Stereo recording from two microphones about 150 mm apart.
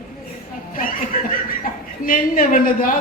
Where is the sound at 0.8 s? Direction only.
70° left (ahead or behind).